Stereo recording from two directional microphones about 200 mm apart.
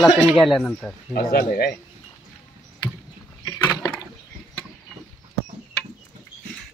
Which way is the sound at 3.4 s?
15° left (ahead or behind).